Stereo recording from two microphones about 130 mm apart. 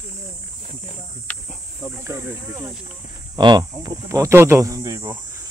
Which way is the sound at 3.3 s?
30° right (ahead or behind).